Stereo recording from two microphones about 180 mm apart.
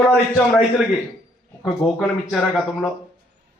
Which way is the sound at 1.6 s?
Centre (ahead or behind).